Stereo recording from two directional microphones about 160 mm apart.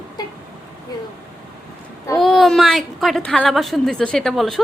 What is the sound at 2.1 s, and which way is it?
A woman's voice, centre (ahead or behind).